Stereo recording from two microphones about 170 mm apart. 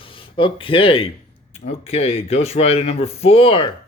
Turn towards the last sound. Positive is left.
turn(degrees=30)  # may be behind; listen again after turning